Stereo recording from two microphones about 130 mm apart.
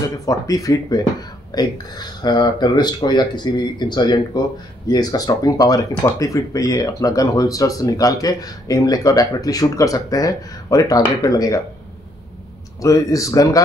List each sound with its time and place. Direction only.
0.2 s speech: 25° left (ahead or behind)
12.8 s speech: 25° left (ahead or behind)